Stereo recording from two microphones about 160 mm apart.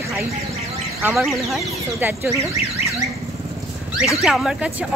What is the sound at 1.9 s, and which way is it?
Speech, 15° right (ahead or behind).